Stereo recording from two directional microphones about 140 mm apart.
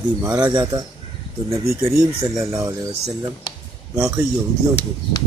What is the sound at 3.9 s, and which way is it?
Speech, 20° right (ahead or behind).